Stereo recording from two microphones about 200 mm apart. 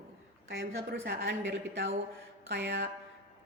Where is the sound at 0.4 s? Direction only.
65° right (ahead or behind).